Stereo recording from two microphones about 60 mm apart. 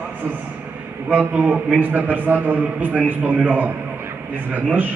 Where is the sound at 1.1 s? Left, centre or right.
Right.